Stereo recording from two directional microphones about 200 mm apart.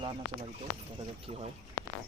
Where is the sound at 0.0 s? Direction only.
25° right (ahead or behind).